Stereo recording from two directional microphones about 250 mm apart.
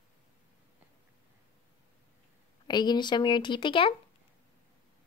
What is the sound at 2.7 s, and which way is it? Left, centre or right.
Speech, centre.